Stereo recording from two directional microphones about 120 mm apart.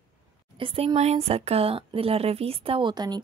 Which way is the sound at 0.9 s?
60° right (ahead or behind).